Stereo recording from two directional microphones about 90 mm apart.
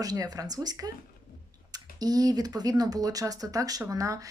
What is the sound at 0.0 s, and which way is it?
Speech, 45° right (ahead or behind).